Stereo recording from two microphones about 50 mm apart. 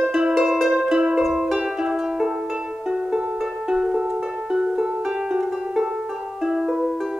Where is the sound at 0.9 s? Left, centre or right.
Centre.